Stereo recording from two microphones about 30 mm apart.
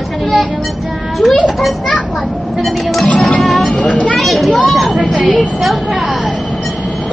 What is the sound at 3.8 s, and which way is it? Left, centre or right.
Speech, left.